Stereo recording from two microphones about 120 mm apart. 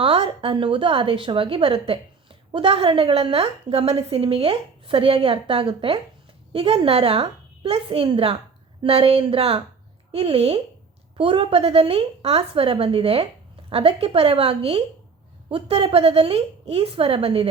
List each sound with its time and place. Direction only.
0.0 s a woman's voice: 50° right (ahead or behind)